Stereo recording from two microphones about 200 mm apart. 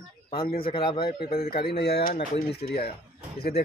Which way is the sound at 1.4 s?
50° left (ahead or behind).